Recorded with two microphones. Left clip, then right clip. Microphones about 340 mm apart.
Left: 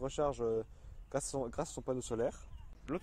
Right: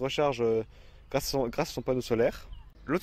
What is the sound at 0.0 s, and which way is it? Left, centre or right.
Speech, right.